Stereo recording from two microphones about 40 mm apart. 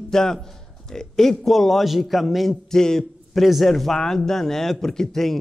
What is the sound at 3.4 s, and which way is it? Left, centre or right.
A man's voice, centre.